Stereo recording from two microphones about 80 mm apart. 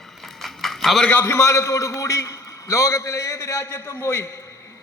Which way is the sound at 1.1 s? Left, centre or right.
Left.